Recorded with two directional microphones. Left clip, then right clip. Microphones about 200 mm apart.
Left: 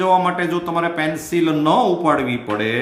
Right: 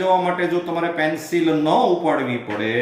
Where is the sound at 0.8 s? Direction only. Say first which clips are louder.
Left 2 dB; 35° left (ahead or behind).